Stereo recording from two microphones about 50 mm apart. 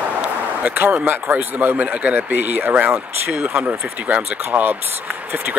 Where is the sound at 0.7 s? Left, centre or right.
Right.